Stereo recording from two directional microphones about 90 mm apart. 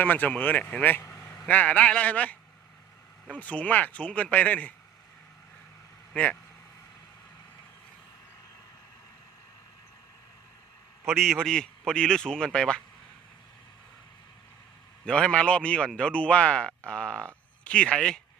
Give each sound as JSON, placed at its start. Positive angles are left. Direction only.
{"t": 0.0, "sound": "speech", "side_deg": 20}
{"t": 1.0, "sound": "vehicle", "side_deg": 30}
{"t": 1.5, "sound": "speech", "side_deg": 15}
{"t": 11.1, "sound": "speech", "side_deg": 5}
{"t": 15.0, "sound": "speech", "side_deg": 10}